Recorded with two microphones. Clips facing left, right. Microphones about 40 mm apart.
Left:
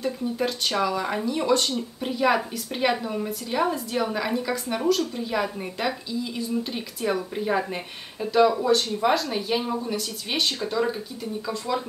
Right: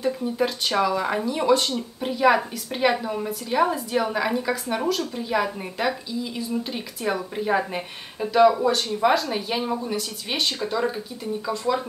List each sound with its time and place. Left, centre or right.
0.0 s speech: centre